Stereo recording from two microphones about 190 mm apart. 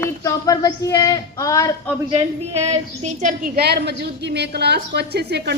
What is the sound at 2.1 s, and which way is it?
A woman's voice, 35° right (ahead or behind).